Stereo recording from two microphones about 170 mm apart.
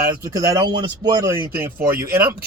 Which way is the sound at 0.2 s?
20° right (ahead or behind).